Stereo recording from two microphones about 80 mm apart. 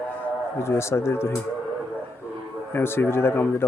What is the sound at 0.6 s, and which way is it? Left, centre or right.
Speech, left.